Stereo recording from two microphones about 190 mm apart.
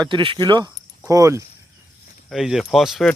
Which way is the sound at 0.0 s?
25° right (ahead or behind).